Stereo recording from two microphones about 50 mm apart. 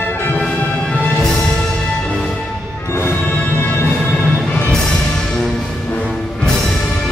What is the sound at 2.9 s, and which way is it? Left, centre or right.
Music, left.